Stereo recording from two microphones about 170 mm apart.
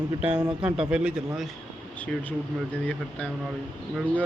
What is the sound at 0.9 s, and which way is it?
Speech, 5° right (ahead or behind).